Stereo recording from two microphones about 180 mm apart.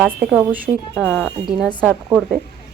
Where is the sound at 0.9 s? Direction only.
10° left (ahead or behind).